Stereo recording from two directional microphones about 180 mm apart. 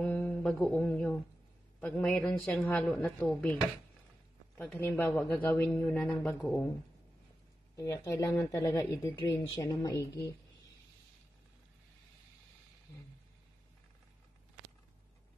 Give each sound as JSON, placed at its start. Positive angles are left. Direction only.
{"t": 0.0, "sound": "speech", "side_deg": 10}
{"t": 4.6, "sound": "speech", "side_deg": 10}
{"t": 6.2, "sound": "speech", "side_deg": 15}
{"t": 7.7, "sound": "speech", "side_deg": 15}